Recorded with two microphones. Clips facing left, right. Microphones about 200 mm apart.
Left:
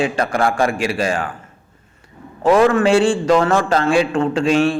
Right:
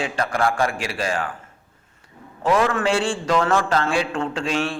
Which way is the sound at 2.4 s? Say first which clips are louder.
Left 7 dB; 45° left (ahead or behind).